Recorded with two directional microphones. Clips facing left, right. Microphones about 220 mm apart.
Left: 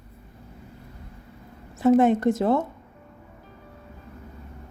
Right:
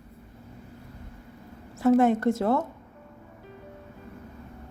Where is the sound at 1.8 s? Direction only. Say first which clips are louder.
Left 2 dB; 20° left (ahead or behind).